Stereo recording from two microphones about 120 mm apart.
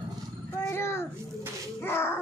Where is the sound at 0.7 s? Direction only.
20° left (ahead or behind).